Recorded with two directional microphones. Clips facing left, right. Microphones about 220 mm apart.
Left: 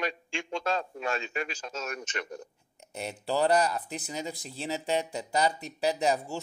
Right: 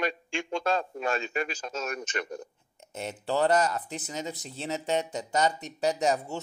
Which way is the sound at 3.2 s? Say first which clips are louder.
Right 1 dB; 10° left (ahead or behind).